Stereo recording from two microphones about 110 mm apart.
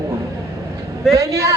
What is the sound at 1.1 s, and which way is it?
Speech, 30° right (ahead or behind).